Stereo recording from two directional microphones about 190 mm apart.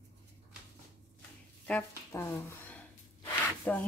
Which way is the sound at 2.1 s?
15° left (ahead or behind).